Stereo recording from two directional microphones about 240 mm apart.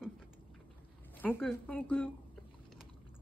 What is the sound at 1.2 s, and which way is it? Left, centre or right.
Speech, centre.